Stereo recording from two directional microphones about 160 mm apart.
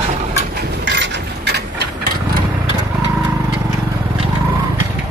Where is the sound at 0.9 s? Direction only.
90° right.